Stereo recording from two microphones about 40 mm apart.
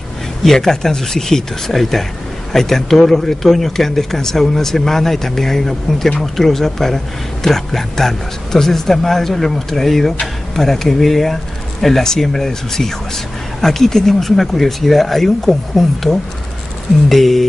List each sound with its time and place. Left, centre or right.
0.4 s speech: centre